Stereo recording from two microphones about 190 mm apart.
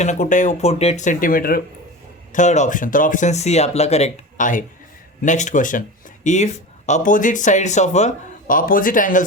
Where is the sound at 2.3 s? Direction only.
40° left (ahead or behind).